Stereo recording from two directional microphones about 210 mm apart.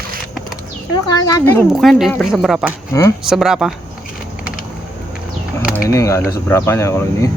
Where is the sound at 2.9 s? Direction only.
15° left (ahead or behind).